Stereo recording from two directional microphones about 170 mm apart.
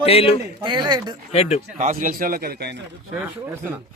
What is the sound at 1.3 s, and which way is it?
Speech, 40° left (ahead or behind).